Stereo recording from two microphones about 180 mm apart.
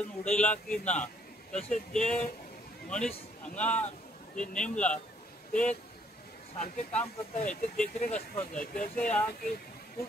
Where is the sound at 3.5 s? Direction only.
5° left (ahead or behind).